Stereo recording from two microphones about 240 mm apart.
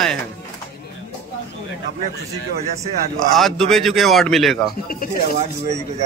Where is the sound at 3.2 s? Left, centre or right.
Centre.